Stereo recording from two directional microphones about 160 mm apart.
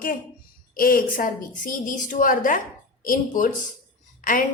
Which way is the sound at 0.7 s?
65° left (ahead or behind).